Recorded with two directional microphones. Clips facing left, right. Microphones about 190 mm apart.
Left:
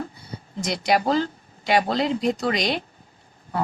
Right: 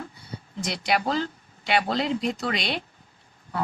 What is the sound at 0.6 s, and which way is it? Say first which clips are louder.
Speech: left 4 dB; 45° left (ahead or behind).